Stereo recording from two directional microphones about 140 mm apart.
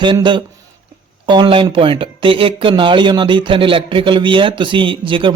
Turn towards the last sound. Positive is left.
turn(degrees=-35)  # may be behind; listen again after turning